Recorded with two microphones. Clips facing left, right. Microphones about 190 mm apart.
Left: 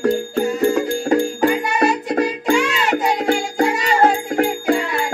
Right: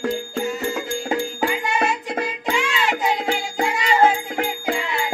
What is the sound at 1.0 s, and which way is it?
Music, 45° left (ahead or behind).